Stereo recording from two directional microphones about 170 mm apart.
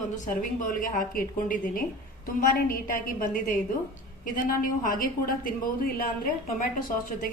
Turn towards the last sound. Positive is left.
turn(degrees=55)  # may be behind; listen again after turning